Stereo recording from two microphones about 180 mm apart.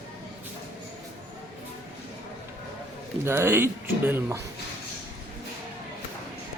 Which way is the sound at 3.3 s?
15° right (ahead or behind).